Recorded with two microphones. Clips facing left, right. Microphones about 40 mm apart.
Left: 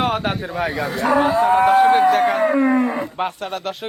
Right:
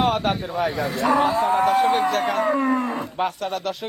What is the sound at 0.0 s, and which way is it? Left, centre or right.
Speech, left.